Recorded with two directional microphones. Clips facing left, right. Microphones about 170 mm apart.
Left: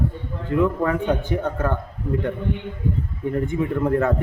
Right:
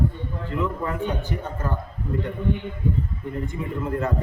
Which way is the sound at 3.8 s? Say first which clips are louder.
Left 5 dB; 60° left (ahead or behind).